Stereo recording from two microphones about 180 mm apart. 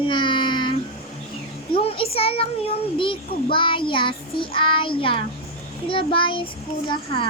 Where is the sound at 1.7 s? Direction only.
30° left (ahead or behind).